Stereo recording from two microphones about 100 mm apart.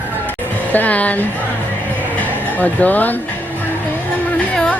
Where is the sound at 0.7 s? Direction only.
15° left (ahead or behind).